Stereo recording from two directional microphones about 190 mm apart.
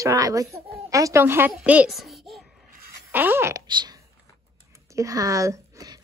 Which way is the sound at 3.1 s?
10° right (ahead or behind).